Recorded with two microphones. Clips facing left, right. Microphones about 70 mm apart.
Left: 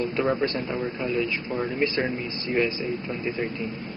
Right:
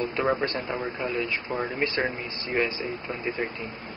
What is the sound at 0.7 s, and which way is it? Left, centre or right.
Speech, centre.